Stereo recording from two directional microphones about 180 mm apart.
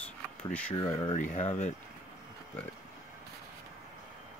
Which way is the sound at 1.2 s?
45° left (ahead or behind).